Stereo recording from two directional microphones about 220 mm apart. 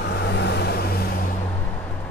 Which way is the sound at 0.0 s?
50° left (ahead or behind).